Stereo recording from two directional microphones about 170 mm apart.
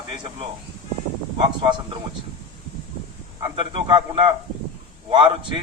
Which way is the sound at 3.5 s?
30° right (ahead or behind).